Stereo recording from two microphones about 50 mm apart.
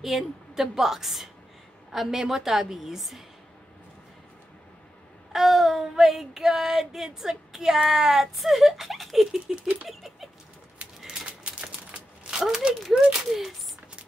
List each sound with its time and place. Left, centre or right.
0.0 s child singing: centre
5.3 s child singing: centre
9.8 s bird flight: centre
11.0 s typewriter: centre
11.2 s typewriter: right
12.3 s speech: centre
12.8 s child singing: centre